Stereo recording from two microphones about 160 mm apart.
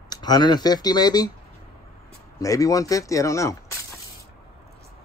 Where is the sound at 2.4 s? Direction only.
20° left (ahead or behind).